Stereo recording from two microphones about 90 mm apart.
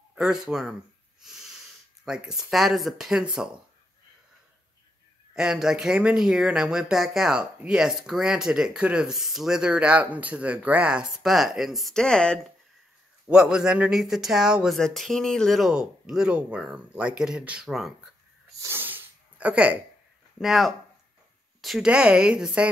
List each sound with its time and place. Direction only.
0.1 s speech: 5° right (ahead or behind)
1.2 s wheeze: 5° right (ahead or behind)
2.0 s speech: 10° right (ahead or behind)
5.3 s speech: 5° right (ahead or behind); by 12.4 s 10° left (ahead or behind)
13.3 s speech: 10° right (ahead or behind)
14.8 s speech: 5° left (ahead or behind)
18.5 s sneeze: 40° right (ahead or behind)
18.8 s a sound: 20° right (ahead or behind)
20.3 s speech: 5° right (ahead or behind)
21.5 s a sound: centre (ahead or behind)
21.8 s speech: 10° right (ahead or behind)